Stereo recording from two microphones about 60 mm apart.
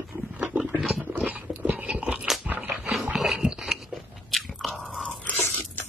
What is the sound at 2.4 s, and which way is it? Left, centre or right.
Dog, right.